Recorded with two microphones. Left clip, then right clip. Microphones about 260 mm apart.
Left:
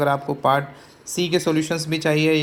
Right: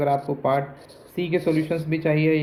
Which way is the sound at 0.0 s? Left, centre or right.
Left.